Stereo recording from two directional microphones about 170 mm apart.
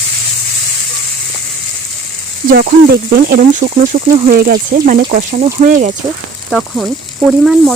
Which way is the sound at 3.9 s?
45° right (ahead or behind).